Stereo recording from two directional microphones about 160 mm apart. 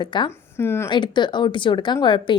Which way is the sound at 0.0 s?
30° left (ahead or behind).